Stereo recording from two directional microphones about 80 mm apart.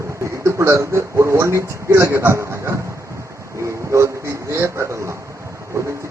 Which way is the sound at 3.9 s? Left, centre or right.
Right.